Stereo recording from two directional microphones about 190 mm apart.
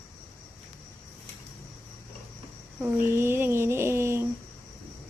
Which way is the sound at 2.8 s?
10° right (ahead or behind).